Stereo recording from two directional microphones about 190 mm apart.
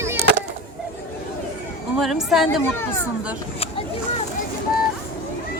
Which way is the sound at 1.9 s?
Centre (ahead or behind).